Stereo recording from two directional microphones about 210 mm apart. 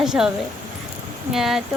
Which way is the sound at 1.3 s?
Centre (ahead or behind).